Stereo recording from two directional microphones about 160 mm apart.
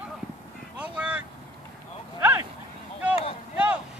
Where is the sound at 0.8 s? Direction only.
5° right (ahead or behind).